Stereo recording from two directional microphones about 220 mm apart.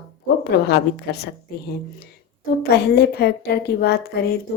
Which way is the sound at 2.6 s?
45° left (ahead or behind).